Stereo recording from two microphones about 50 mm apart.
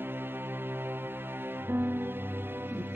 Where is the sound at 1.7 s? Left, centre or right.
Right.